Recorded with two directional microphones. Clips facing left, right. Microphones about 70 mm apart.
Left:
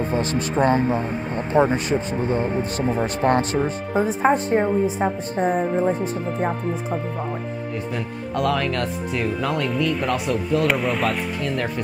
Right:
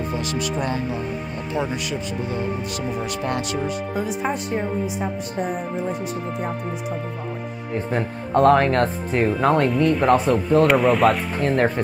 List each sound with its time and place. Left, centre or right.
0.0 s speech: left
7.7 s speech: right
10.7 s speech: centre
11.3 s speech: right